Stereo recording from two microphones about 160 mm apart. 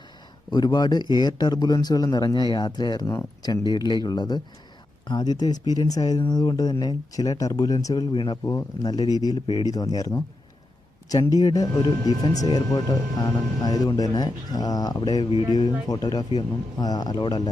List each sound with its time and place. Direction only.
0.5 s speech: 25° left (ahead or behind)